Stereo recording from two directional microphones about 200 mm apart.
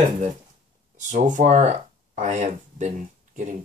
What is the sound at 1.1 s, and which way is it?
Speech, 40° right (ahead or behind).